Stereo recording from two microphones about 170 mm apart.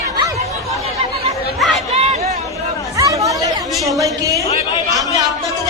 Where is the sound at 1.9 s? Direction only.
40° right (ahead or behind).